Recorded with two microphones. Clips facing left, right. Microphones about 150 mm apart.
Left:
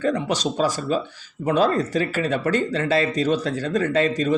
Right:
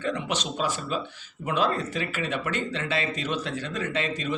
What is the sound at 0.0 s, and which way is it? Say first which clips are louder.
A man's voice: left 7 dB; 40° left (ahead or behind).